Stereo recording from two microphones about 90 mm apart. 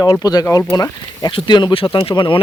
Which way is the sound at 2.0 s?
70° left (ahead or behind).